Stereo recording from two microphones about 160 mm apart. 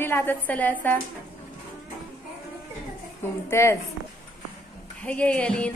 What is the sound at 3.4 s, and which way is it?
Speech, 15° left (ahead or behind).